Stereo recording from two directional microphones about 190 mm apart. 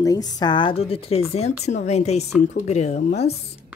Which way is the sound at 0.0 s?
20° left (ahead or behind).